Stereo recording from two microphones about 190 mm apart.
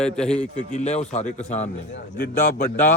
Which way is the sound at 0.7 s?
35° left (ahead or behind).